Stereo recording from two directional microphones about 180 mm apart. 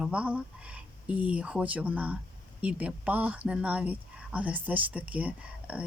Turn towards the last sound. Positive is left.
turn(degrees=-10)  # may be behind; listen again after turning